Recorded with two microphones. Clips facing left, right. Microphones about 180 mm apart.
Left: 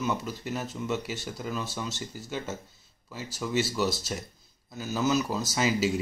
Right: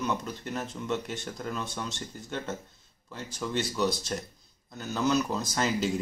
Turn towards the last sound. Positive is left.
turn(degrees=5)  # may be behind; listen again after turning